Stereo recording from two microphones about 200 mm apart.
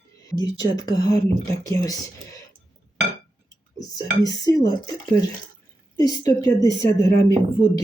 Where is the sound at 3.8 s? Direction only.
20° left (ahead or behind).